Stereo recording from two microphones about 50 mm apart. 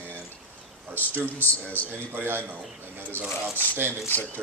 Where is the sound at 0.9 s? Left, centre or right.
Right.